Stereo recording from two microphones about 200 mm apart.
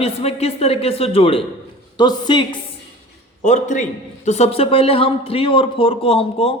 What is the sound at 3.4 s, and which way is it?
A man's voice, 35° left (ahead or behind).